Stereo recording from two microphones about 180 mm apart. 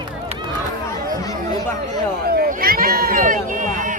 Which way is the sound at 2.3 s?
55° right (ahead or behind).